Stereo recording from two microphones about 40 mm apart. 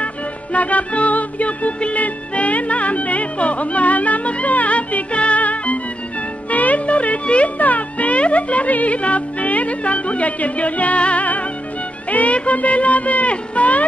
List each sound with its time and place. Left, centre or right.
0.0 s music: left
6.5 s a child's voice: left
12.1 s music: left
12.4 s speech: left